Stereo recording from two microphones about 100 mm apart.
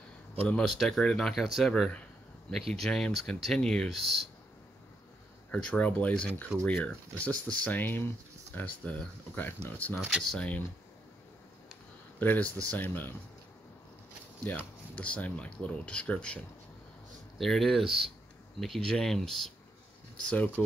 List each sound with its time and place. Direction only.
0.5 s speech: 5° left (ahead or behind)
5.5 s speech: 10° left (ahead or behind)
9.9 s speech: 5° right (ahead or behind)
10.3 s speech: 15° left (ahead or behind)
12.2 s speech: 15° left (ahead or behind)
15.0 s speech: 15° left (ahead or behind)
17.4 s speech: centre (ahead or behind)
20.2 s speech: 15° left (ahead or behind)